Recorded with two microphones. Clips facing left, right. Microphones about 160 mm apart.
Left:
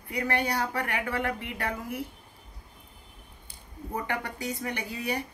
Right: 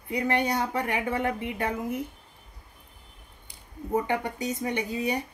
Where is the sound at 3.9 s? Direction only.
20° right (ahead or behind).